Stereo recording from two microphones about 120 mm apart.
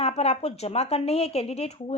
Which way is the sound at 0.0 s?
65° left (ahead or behind).